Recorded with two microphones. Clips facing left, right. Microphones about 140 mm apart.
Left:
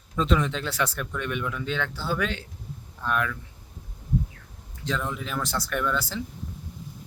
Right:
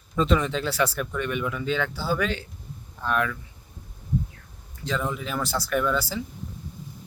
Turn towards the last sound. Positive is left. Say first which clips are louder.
# right 2 dB
turn(degrees=-5)  # may be behind; listen again after turning